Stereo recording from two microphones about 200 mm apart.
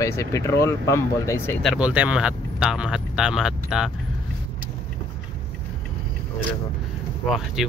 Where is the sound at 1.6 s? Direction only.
5° right (ahead or behind).